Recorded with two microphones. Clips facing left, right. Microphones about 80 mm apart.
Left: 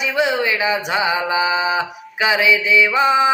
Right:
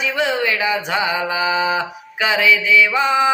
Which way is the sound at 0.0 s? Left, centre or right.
Centre.